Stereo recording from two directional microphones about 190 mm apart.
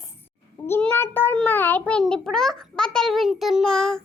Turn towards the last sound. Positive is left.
turn(degrees=5)  # may be behind; listen again after turning